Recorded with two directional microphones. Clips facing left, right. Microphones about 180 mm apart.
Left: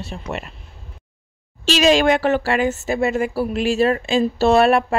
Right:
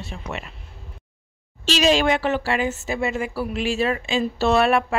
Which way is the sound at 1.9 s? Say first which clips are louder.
Left 4 dB; 45° left (ahead or behind).